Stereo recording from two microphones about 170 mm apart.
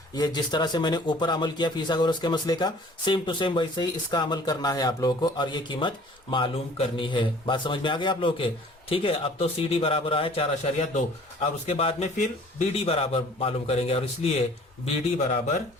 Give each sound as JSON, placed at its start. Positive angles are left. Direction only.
{"t": 0.1, "sound": "a man's voice", "side_deg": 25}